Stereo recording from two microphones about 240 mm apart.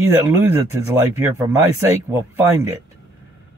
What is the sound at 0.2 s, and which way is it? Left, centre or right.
Speech, centre.